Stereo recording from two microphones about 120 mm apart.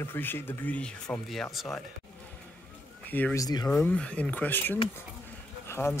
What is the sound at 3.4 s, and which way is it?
Speech, 35° left (ahead or behind).